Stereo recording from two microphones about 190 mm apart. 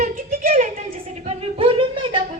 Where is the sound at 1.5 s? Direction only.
25° right (ahead or behind).